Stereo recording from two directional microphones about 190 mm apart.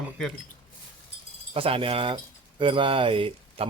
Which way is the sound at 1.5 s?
30° right (ahead or behind).